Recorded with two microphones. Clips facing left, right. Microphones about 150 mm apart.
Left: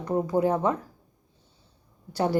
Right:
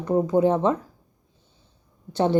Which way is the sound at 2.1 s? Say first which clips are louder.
Right 4 dB; 20° right (ahead or behind).